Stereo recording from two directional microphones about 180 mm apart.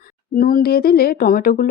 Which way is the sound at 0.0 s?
50° left (ahead or behind).